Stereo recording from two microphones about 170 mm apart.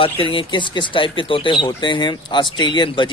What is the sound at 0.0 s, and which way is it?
Speech, 30° left (ahead or behind).